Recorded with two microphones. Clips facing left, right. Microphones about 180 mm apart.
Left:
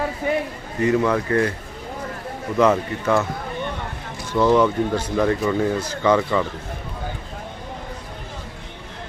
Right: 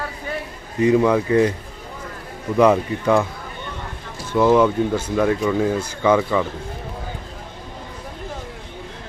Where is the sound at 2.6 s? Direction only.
15° right (ahead or behind).